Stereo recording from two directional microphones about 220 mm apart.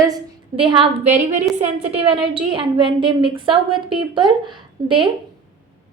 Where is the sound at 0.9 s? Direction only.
35° right (ahead or behind).